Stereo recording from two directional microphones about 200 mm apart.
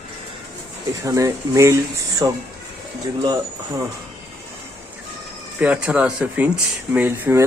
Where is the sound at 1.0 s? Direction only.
15° right (ahead or behind).